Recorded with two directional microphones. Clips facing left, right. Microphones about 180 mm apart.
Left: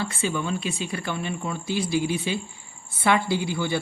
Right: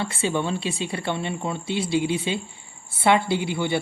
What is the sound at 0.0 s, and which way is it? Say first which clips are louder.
Speech: right 2 dB; 25° right (ahead or behind).